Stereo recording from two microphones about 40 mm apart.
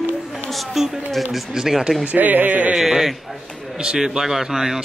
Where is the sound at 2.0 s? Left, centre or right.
Right.